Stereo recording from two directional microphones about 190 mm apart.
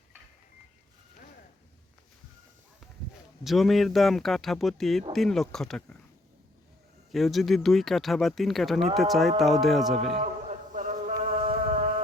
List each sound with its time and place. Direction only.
3.4 s speech: centre (ahead or behind)
7.1 s speech: centre (ahead or behind)
10.2 s a sound: 40° right (ahead or behind)